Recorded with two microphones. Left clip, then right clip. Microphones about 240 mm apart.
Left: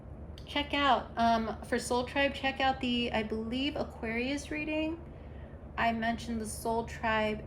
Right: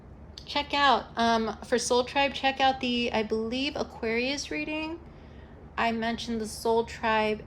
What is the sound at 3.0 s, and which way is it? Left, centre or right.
A woman's voice, right.